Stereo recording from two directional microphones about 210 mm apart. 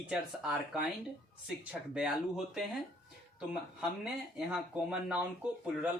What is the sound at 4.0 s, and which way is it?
Speech, 5° right (ahead or behind).